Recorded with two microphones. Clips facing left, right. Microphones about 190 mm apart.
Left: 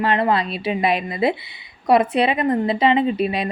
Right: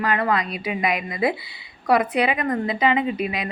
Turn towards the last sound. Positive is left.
turn(degrees=30)  # may be behind; listen again after turning